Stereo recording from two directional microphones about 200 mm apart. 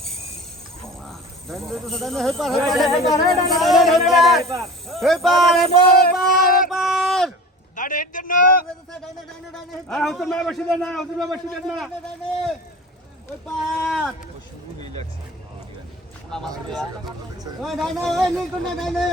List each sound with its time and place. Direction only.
1.0 s speech: centre (ahead or behind)
5.6 s male singing: 50° left (ahead or behind)
6.7 s a sound: centre (ahead or behind)
7.8 s a sound: 40° left (ahead or behind)
9.9 s speech: centre (ahead or behind)
13.4 s speech: centre (ahead or behind)
16.6 s speech: centre (ahead or behind)